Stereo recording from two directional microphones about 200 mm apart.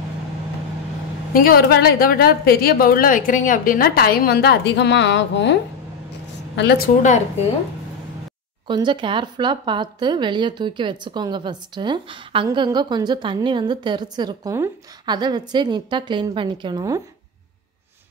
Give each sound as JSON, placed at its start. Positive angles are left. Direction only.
{"t": 1.3, "sound": "a woman's voice", "side_deg": 45}
{"t": 8.6, "sound": "speech", "side_deg": -25}